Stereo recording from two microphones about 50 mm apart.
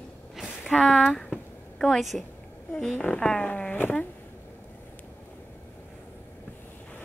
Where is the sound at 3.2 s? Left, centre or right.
Centre.